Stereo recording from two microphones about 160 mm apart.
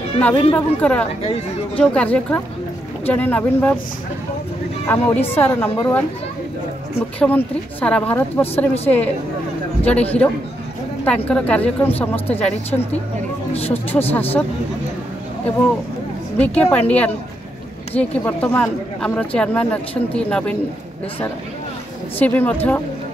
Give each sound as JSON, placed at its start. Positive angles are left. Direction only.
{"t": 0.2, "sound": "speech", "side_deg": 10}
{"t": 4.8, "sound": "speech", "side_deg": 15}
{"t": 7.2, "sound": "speech", "side_deg": 10}
{"t": 9.8, "sound": "speech", "side_deg": 10}
{"t": 13.5, "sound": "speech", "side_deg": 40}
{"t": 13.9, "sound": "speech", "side_deg": 10}
{"t": 16.3, "sound": "a woman's voice", "side_deg": 10}
{"t": 22.2, "sound": "speech", "side_deg": 10}